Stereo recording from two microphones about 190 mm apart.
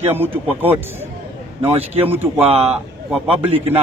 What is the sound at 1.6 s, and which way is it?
Speech, 30° right (ahead or behind).